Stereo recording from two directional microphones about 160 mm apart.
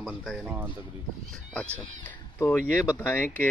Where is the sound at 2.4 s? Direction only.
15° left (ahead or behind).